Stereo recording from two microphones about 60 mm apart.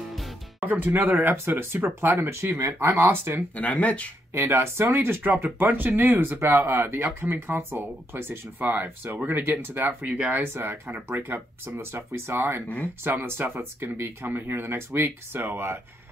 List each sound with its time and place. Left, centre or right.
0.6 s speech: right
3.5 s speech: left
4.3 s speech: right
12.6 s speech: left
13.0 s speech: right